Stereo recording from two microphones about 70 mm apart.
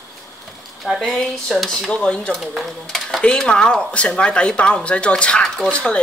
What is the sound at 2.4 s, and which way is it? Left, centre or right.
Speech, centre.